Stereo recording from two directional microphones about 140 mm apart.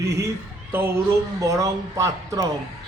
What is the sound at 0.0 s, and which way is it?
Speech, 20° right (ahead or behind).